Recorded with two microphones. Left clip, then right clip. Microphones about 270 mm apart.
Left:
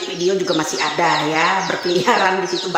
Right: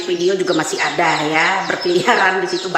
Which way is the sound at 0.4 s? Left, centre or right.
Centre.